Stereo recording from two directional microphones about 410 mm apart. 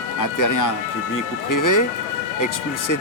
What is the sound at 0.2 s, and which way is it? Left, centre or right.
Speech, left.